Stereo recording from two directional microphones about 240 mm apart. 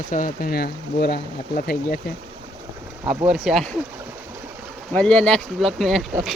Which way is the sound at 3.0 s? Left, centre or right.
Right.